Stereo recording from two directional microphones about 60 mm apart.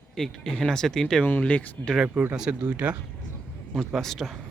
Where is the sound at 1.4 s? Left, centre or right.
Left.